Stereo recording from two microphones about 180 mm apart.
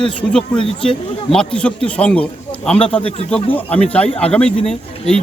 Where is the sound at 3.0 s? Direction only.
35° left (ahead or behind).